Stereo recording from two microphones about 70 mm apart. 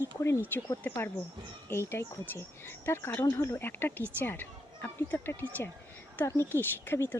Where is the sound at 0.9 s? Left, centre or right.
Left.